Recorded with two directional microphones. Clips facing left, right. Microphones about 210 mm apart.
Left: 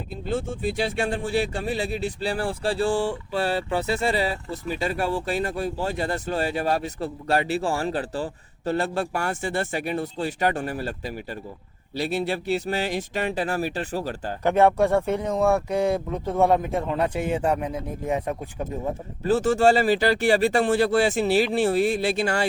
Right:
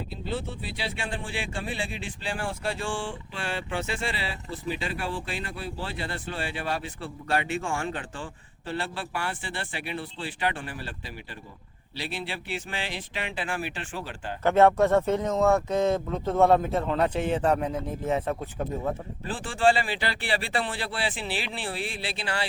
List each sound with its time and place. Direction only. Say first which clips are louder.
0.3 s speech: left 8 dB; 45° left (ahead or behind)
14.4 s speech: left 1 dB; 15° left (ahead or behind)
19.2 s speech: left 6 dB; 40° left (ahead or behind)